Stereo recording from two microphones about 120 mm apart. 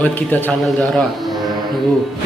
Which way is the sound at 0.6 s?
5° left (ahead or behind).